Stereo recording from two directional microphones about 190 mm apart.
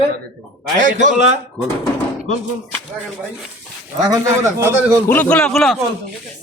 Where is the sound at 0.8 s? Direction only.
40° right (ahead or behind).